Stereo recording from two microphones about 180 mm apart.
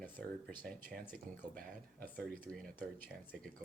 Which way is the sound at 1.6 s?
50° right (ahead or behind).